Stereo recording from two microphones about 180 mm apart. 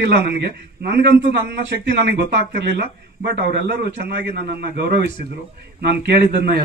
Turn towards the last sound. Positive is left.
turn(degrees=-65)  # may be behind; listen again after turning